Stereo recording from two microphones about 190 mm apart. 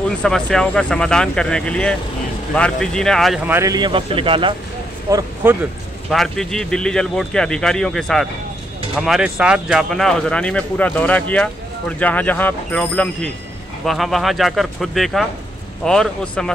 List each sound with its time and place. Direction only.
0.2 s speech: 5° left (ahead or behind)
3.4 s speech: 15° right (ahead or behind)
6.0 s speech: centre (ahead or behind)